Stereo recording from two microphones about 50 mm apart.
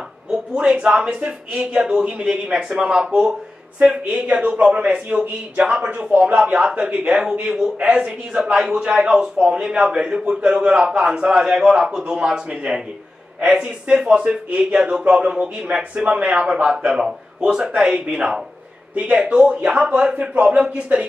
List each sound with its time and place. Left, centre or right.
0.3 s a man's voice: centre
4.0 s speech: right
8.4 s a man's voice: centre
16.7 s a man's voice: centre